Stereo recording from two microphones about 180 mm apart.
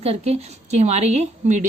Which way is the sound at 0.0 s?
35° right (ahead or behind).